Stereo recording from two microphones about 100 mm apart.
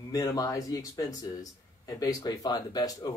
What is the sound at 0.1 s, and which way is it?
Speech, 35° left (ahead or behind).